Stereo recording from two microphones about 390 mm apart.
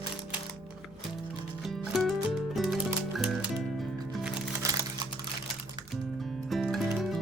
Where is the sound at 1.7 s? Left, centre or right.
Centre.